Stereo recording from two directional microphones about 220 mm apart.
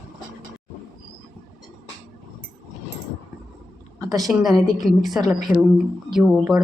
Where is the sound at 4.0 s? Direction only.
15° right (ahead or behind).